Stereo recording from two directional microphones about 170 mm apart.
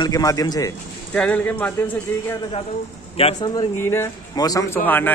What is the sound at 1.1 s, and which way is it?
Speech, 10° left (ahead or behind).